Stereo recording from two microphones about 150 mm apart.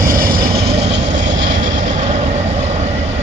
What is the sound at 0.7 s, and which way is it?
Vehicle, 45° right (ahead or behind).